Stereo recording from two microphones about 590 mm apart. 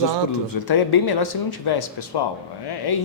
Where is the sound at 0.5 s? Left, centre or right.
Left.